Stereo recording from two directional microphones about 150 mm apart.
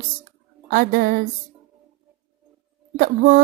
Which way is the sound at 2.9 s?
80° right.